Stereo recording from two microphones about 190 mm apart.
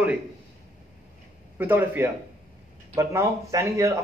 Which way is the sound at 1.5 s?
10° right (ahead or behind).